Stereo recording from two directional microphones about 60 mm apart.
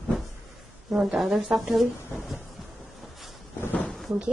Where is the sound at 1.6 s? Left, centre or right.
Centre.